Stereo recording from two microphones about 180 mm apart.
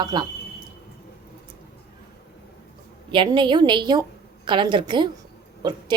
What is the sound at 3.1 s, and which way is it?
A woman's voice, 25° right (ahead or behind).